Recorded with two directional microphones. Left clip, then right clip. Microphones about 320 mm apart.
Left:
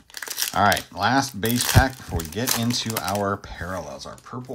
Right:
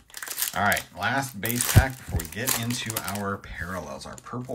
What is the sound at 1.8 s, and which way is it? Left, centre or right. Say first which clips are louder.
Speech: left 5 dB; right.